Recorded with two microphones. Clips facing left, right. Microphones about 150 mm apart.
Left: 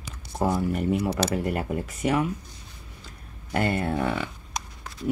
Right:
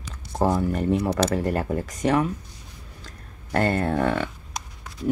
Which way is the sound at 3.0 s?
10° left (ahead or behind).